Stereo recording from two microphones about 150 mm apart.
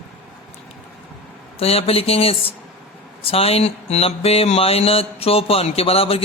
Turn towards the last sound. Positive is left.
turn(degrees=40)  # may be behind; listen again after turning